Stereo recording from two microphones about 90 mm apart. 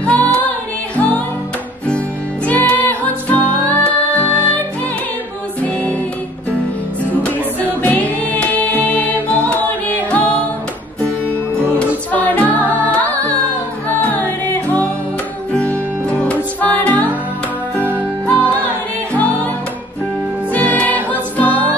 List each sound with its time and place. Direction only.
0.0 s music: 15° left (ahead or behind)
2.4 s music: 15° left (ahead or behind)
7.6 s music: 15° left (ahead or behind)
12.1 s music: 15° left (ahead or behind)
18.2 s music: 15° left (ahead or behind)
20.5 s music: 20° left (ahead or behind)